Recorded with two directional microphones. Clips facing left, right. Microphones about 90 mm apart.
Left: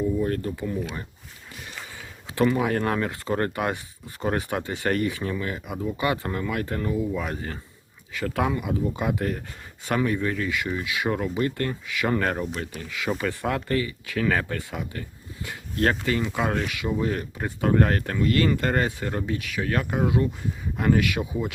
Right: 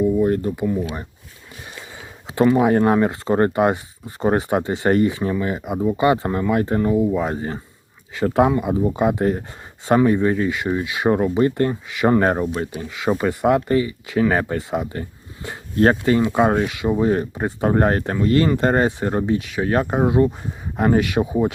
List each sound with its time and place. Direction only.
0.2 s speech: 20° right (ahead or behind)
2.3 s speech: 25° right (ahead or behind)